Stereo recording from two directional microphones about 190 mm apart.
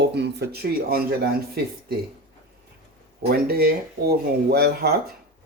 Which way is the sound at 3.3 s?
55° right (ahead or behind).